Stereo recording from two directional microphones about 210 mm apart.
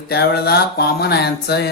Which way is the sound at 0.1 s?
50° left (ahead or behind).